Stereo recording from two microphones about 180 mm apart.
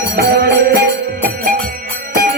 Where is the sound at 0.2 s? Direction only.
60° right (ahead or behind).